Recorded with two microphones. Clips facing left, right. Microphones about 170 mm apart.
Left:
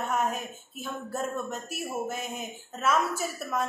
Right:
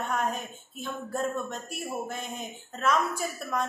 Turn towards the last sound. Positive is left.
turn(degrees=5)  # may be behind; listen again after turning